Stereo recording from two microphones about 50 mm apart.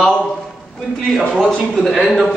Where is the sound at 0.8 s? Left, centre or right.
Centre.